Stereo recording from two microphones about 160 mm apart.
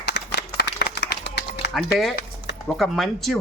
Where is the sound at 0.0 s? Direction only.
90° left.